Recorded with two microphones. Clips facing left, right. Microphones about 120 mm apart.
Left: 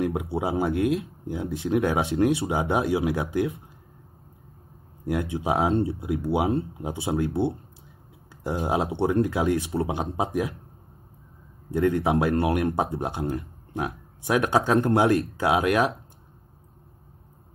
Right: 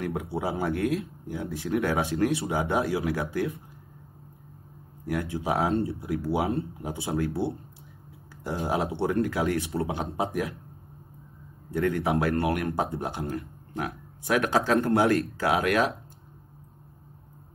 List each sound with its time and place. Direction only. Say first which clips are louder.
0.0 s speech: left 4 dB; 25° left (ahead or behind)
5.0 s speech: left 3 dB; 20° left (ahead or behind)
11.7 s speech: left 3 dB; 25° left (ahead or behind)